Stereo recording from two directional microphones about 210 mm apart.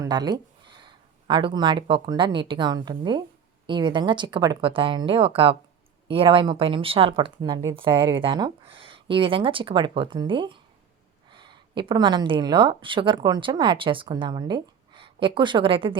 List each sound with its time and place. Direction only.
0.0 s speech: 20° right (ahead or behind)